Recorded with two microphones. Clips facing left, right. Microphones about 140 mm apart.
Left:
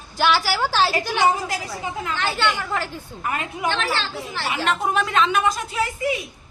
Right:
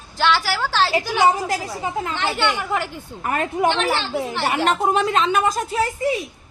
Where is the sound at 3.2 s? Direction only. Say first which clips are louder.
Right 6 dB; 45° right (ahead or behind).